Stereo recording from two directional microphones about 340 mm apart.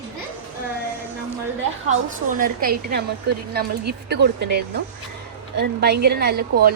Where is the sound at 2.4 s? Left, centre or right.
Right.